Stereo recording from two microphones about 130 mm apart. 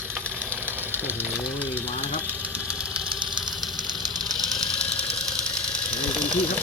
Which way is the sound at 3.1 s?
40° right (ahead or behind).